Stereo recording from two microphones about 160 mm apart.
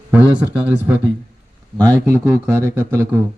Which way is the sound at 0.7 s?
10° right (ahead or behind).